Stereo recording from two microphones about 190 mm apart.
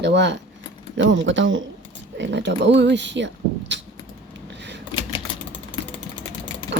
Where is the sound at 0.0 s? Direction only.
65° right (ahead or behind).